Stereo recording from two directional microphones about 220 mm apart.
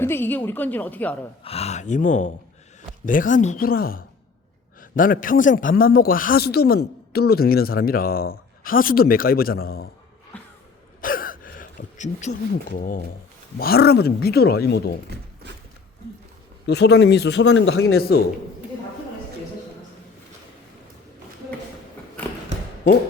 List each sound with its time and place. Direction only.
0.0 s a woman's voice: 10° left (ahead or behind)
1.5 s a man's voice: 30° left (ahead or behind)
10.3 s music: 5° left (ahead or behind)
11.0 s gasp: 40° left (ahead or behind)
13.6 s a man's voice: 45° left (ahead or behind)
16.6 s a man's voice: 50° left (ahead or behind)